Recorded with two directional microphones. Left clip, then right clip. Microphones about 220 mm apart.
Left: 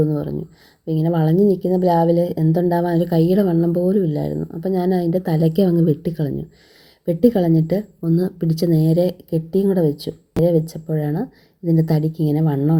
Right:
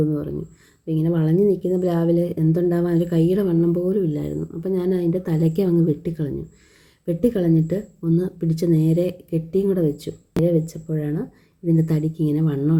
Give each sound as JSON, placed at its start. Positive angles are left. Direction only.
{"t": 0.1, "sound": "a woman's voice", "side_deg": 10}